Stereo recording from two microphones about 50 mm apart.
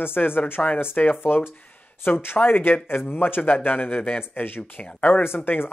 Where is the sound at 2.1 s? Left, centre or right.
Left.